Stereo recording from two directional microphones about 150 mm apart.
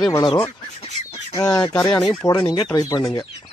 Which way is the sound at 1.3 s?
25° left (ahead or behind).